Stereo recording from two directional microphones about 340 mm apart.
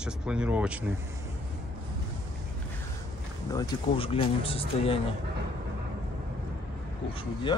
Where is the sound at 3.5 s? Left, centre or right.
Centre.